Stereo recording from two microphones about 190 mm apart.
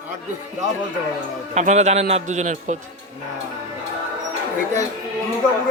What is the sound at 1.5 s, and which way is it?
A man's voice, 35° right (ahead or behind).